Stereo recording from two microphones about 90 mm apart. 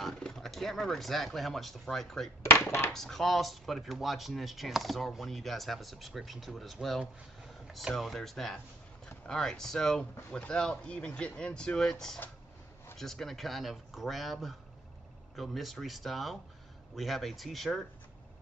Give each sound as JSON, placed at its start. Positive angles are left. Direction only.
{"t": 0.0, "sound": "speech", "side_deg": 5}
{"t": 2.6, "sound": "speech", "side_deg": 30}
{"t": 2.9, "sound": "speech", "side_deg": 5}